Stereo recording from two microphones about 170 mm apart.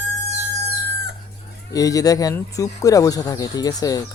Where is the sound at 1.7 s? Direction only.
20° left (ahead or behind).